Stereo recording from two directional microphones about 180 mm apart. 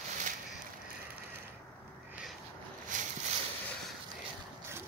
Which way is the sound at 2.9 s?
45° right (ahead or behind).